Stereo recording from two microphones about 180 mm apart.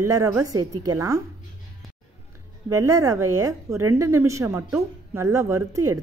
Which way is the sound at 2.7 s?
20° right (ahead or behind).